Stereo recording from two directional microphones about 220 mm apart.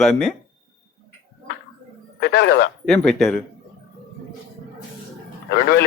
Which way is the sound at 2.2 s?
50° left (ahead or behind).